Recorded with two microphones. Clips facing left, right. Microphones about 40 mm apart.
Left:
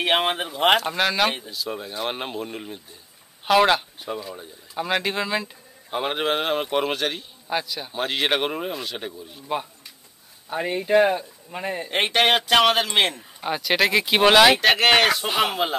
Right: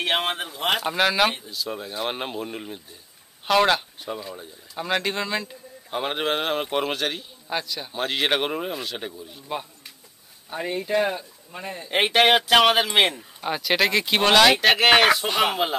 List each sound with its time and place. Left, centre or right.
0.0 s a man's voice: centre
0.7 s a man's voice: centre; by 11.9 s left
11.9 s speech: centre